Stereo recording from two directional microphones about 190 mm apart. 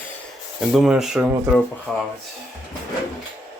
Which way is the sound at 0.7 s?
Centre (ahead or behind).